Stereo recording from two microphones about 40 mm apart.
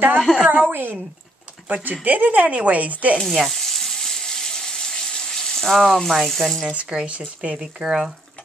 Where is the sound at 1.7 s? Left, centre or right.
Right.